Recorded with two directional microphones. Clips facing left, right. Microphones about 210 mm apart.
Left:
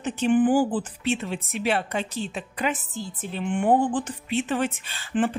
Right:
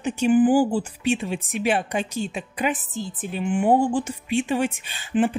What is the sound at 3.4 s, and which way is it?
Speech, 5° right (ahead or behind).